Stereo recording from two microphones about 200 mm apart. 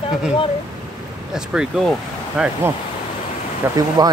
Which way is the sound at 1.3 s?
5° right (ahead or behind).